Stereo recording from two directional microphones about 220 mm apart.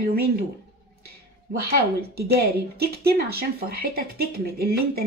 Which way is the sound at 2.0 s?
45° right (ahead or behind).